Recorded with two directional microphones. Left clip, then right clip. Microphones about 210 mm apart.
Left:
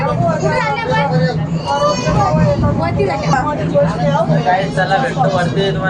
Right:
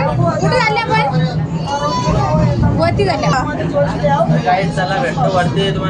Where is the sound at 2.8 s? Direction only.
40° right (ahead or behind).